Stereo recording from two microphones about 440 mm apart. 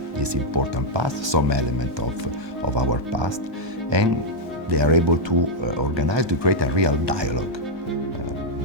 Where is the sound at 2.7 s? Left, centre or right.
Right.